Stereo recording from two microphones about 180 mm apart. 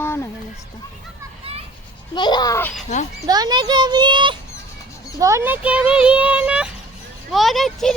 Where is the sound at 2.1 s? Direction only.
25° left (ahead or behind).